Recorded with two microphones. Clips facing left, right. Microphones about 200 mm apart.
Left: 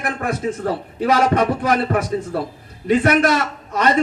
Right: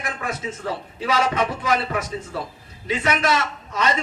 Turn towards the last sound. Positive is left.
turn(degrees=55)  # may be behind; listen again after turning